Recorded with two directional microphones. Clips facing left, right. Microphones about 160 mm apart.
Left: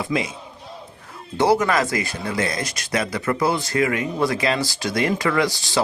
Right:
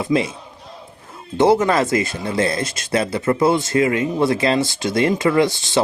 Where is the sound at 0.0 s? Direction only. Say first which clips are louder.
Right 5 dB; 30° right (ahead or behind).